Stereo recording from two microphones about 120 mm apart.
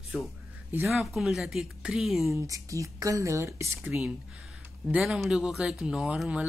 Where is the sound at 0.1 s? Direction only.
10° right (ahead or behind).